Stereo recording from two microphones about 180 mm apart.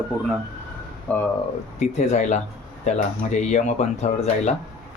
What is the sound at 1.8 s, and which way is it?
Speech, 40° left (ahead or behind).